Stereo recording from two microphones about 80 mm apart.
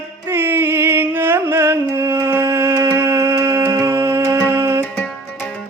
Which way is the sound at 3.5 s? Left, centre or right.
Right.